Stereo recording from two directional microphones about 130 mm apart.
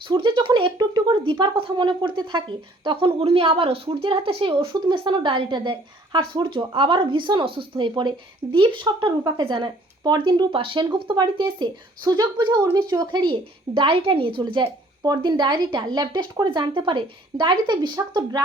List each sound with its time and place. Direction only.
0.1 s speech: 35° right (ahead or behind)